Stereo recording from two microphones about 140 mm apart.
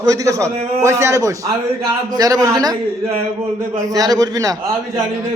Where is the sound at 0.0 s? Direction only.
25° right (ahead or behind).